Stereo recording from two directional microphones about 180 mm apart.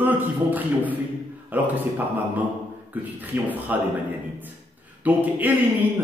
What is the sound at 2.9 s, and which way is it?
Speech, 10° right (ahead or behind).